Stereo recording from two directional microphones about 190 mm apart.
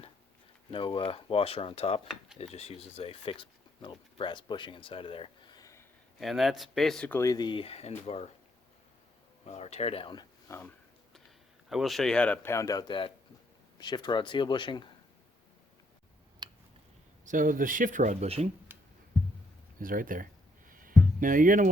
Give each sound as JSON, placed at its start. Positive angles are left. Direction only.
{"t": 0.7, "sound": "speech", "side_deg": 25}
{"t": 6.1, "sound": "speech", "side_deg": 0}
{"t": 9.5, "sound": "speech", "side_deg": 35}
{"t": 11.7, "sound": "speech", "side_deg": 0}
{"t": 16.4, "sound": "a sound", "side_deg": -25}
{"t": 17.2, "sound": "speech", "side_deg": -45}
{"t": 18.7, "sound": "music", "side_deg": -10}
{"t": 19.8, "sound": "speech", "side_deg": -45}
{"t": 20.7, "sound": "music", "side_deg": -45}